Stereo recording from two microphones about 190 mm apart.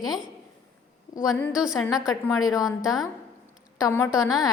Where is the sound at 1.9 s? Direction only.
20° left (ahead or behind).